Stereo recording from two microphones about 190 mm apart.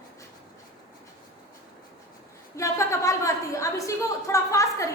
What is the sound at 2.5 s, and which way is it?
A woman's voice, 15° left (ahead or behind).